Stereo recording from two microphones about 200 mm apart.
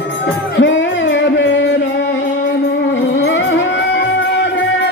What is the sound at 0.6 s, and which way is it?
Music, 65° left (ahead or behind).